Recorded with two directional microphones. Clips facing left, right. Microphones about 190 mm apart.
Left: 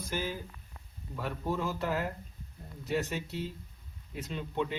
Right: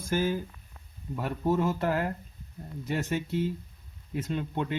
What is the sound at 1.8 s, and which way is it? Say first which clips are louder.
Speech: right 4 dB; 55° right (ahead or behind).